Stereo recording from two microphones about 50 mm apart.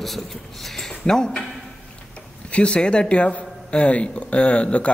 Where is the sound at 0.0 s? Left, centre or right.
Centre.